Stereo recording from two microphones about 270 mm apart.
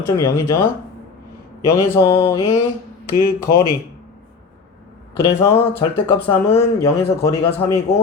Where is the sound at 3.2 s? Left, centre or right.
Left.